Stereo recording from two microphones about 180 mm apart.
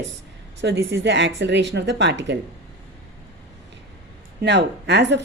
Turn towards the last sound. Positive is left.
turn(degrees=-75)  # may be behind; listen again after turning